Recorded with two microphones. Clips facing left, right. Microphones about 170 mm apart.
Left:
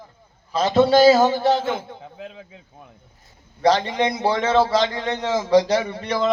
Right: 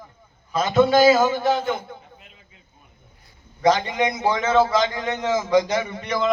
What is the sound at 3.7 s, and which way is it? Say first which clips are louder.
A man's voice: left 1 dB; 30° left (ahead or behind).